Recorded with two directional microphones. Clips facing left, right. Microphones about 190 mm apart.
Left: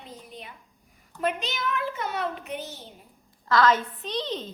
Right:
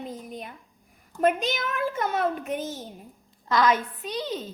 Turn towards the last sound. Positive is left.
turn(degrees=-10)  # may be behind; listen again after turning